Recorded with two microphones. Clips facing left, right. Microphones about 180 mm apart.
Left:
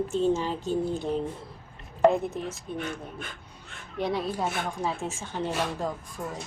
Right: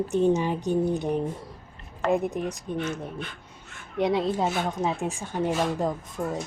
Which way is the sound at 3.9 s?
20° right (ahead or behind).